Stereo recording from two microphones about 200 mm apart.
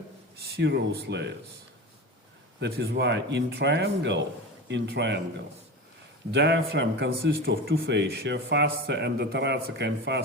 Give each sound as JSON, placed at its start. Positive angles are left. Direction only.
{"t": 0.3, "sound": "speech", "side_deg": -55}
{"t": 2.6, "sound": "speech", "side_deg": -55}
{"t": 6.3, "sound": "speech", "side_deg": -55}